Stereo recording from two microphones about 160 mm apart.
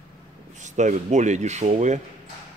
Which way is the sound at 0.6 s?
50° right (ahead or behind).